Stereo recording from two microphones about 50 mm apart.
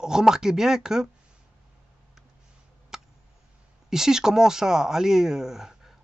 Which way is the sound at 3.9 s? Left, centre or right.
Centre.